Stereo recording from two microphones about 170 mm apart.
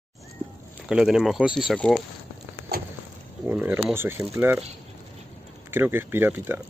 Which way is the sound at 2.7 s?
65° right (ahead or behind).